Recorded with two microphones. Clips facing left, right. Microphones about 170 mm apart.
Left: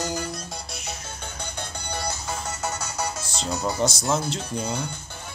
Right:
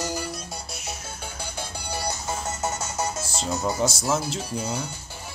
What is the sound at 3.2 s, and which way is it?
Music, 5° right (ahead or behind).